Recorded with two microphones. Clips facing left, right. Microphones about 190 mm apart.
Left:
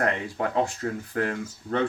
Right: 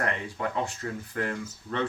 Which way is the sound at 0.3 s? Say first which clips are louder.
Left 5 dB; 50° left (ahead or behind).